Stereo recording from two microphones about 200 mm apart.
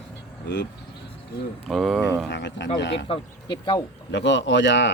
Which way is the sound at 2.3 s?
60° left (ahead or behind).